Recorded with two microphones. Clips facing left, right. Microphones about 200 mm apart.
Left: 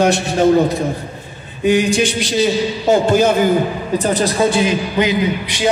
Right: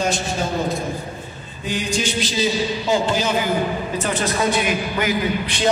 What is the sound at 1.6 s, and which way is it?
A man's voice, 65° left (ahead or behind).